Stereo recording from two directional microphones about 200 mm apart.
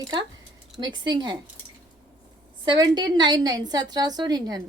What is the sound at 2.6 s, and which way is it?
A woman's voice, 20° right (ahead or behind).